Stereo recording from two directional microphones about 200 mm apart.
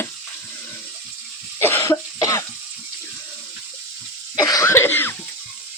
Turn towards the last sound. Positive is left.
turn(degrees=10)  # may be behind; listen again after turning